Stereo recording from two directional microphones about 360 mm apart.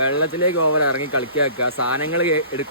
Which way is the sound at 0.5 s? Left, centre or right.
Left.